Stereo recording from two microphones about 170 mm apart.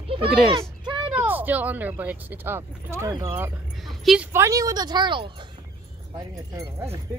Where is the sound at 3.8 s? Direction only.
Centre (ahead or behind).